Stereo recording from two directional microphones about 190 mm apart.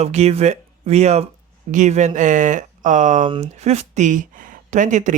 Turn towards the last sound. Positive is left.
turn(degrees=-40)  # may be behind; listen again after turning